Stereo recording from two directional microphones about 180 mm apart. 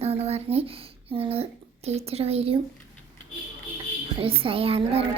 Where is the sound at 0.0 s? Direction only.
35° right (ahead or behind).